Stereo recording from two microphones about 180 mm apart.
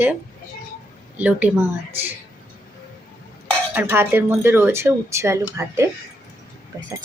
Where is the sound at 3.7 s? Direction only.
10° right (ahead or behind).